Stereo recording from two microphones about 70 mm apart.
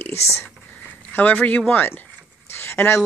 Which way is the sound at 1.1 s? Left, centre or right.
Left.